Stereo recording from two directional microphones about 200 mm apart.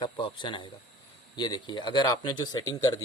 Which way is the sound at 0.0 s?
25° left (ahead or behind).